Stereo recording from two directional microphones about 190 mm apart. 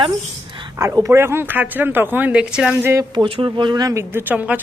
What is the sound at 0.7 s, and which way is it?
Speech, 15° right (ahead or behind).